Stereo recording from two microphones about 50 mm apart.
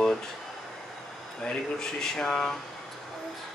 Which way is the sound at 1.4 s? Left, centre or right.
Centre.